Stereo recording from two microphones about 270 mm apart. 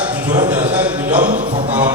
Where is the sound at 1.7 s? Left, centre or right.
Centre.